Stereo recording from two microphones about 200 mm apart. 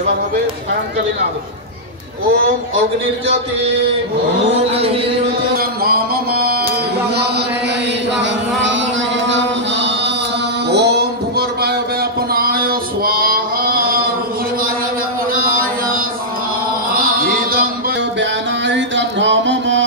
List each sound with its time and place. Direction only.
5.6 s a sound: 50° right (ahead or behind)
8.2 s chant: 65° right (ahead or behind)
10.7 s music: 55° right (ahead or behind)
12.4 s male singing: 50° right (ahead or behind)
15.3 s chant: 45° right (ahead or behind)
18.2 s music: 65° right (ahead or behind)